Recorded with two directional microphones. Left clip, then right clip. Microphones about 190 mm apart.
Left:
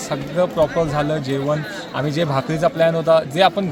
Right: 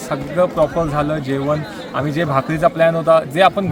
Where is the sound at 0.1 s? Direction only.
15° left (ahead or behind).